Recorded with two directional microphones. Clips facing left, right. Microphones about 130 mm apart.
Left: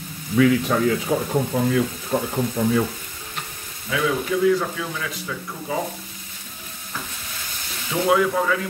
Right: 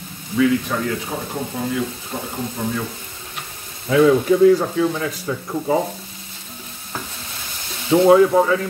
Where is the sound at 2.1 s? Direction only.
50° left (ahead or behind).